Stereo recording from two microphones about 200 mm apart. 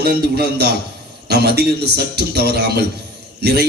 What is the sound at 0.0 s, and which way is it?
A man's voice, 50° right (ahead or behind).